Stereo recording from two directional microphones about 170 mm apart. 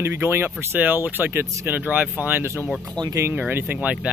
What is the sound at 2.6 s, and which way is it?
Speech, centre (ahead or behind).